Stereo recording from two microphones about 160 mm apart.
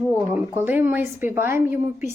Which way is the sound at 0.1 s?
10° right (ahead or behind).